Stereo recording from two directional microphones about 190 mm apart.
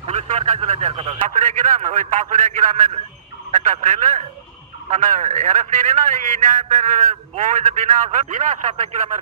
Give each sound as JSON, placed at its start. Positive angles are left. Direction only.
{"t": 0.0, "sound": "speech", "side_deg": -35}
{"t": 1.3, "sound": "a man's voice", "side_deg": -40}